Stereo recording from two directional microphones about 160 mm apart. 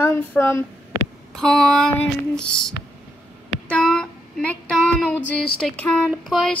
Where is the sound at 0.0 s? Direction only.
15° left (ahead or behind).